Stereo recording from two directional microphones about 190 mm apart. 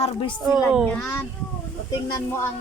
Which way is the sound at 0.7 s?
5° left (ahead or behind).